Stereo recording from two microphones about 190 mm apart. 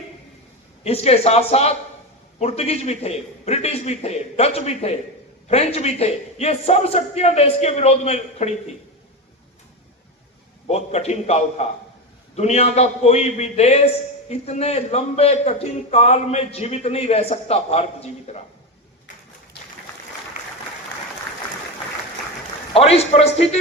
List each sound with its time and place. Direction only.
0.9 s a man's voice: 35° left (ahead or behind)
10.7 s a man's voice: 35° left (ahead or behind)
22.7 s a man's voice: 35° left (ahead or behind)